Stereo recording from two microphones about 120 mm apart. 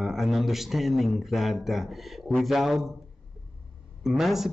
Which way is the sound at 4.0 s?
Centre (ahead or behind).